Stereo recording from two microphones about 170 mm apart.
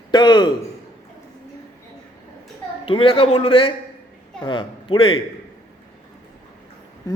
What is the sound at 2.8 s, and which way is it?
A man's voice, 30° left (ahead or behind).